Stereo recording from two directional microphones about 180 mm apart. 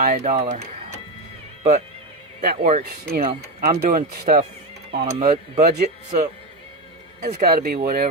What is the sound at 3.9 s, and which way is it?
Speech, 55° right (ahead or behind).